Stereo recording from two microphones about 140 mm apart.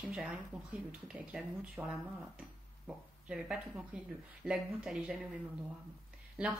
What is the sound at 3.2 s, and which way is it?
Speech, 5° right (ahead or behind).